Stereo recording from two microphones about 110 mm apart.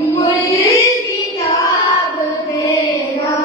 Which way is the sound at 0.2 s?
30° left (ahead or behind).